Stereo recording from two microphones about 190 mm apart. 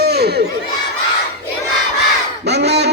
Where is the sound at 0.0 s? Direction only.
60° right (ahead or behind).